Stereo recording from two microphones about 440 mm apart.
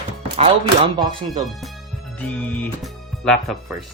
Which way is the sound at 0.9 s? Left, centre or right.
Centre.